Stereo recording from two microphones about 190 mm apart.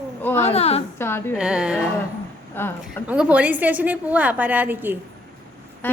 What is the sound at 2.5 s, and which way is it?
Speech, 10° left (ahead or behind).